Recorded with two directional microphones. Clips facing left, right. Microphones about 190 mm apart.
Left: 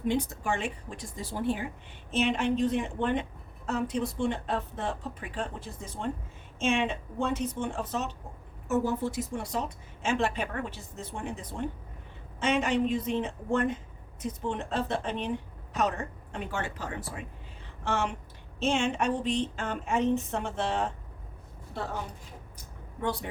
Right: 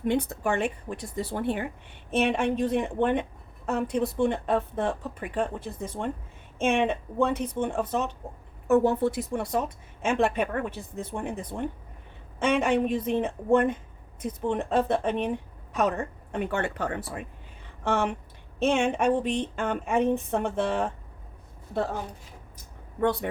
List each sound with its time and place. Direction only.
0.1 s a woman's voice: 60° right (ahead or behind)
23.0 s a woman's voice: 60° right (ahead or behind)